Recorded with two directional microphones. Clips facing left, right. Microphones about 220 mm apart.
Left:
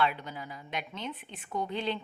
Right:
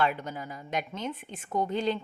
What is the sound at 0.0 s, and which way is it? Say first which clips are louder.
A woman's voice: right 2 dB; 45° right (ahead or behind).